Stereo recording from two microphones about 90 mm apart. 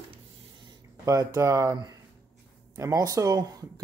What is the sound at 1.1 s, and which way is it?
Speech, 35° right (ahead or behind).